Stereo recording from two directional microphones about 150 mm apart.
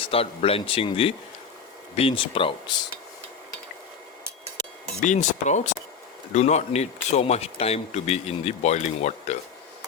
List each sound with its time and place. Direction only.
0.0 s speech: 40° left (ahead or behind)
4.9 s speech: 50° left (ahead or behind)